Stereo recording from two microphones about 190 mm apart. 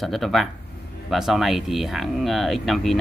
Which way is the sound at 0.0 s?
Centre (ahead or behind).